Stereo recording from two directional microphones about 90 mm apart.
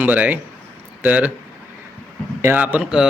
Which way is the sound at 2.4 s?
20° right (ahead or behind).